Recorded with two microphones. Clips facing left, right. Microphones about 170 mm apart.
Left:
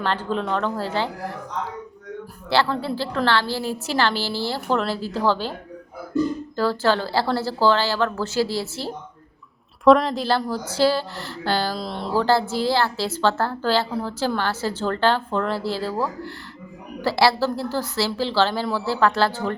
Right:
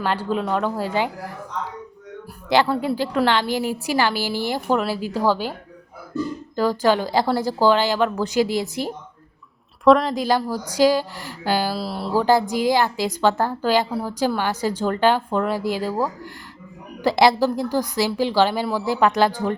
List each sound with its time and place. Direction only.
0.0 s a woman's voice: 10° right (ahead or behind)
2.5 s a woman's voice: 15° right (ahead or behind)
6.6 s a woman's voice: 15° right (ahead or behind)
9.8 s a woman's voice: centre (ahead or behind)
10.2 s a woman's voice: 15° right (ahead or behind)